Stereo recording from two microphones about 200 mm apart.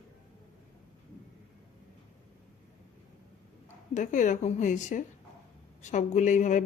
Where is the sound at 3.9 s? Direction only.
40° left (ahead or behind).